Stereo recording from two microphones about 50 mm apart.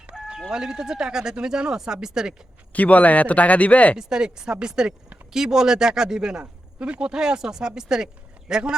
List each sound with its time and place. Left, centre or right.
0.1 s speech: centre
2.7 s speech: left
3.9 s speech: centre